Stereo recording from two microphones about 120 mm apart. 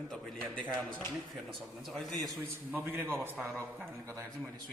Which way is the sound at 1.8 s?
Centre (ahead or behind).